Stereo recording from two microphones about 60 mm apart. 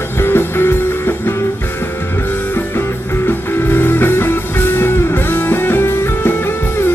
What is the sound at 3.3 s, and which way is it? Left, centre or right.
Music, left.